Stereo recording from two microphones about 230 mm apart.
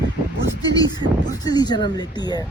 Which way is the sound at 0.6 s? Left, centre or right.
Centre.